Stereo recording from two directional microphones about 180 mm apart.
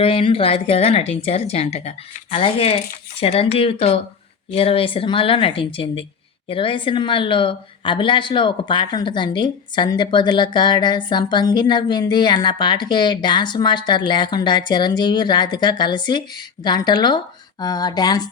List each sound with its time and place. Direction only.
0.0 s a woman's voice: 30° left (ahead or behind)